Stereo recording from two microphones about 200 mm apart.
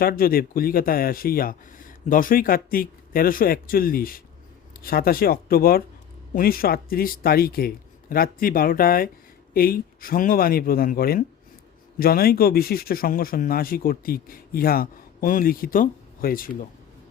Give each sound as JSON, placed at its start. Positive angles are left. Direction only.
{"t": 0.0, "sound": "speech", "side_deg": 50}